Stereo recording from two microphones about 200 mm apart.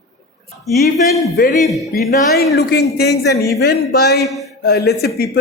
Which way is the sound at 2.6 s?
55° left (ahead or behind).